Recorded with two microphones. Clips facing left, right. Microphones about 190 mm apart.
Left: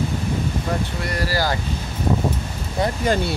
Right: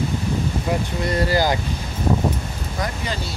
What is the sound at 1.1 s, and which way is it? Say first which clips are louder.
Speech: right 4 dB; 20° right (ahead or behind).